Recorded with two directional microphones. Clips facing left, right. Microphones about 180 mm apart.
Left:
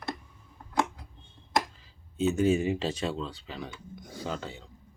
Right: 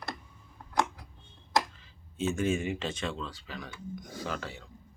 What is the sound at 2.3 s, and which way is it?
Speech, 35° left (ahead or behind).